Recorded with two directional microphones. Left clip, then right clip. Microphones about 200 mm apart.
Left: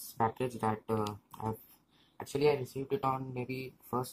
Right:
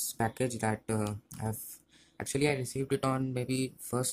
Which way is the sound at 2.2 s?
55° right (ahead or behind).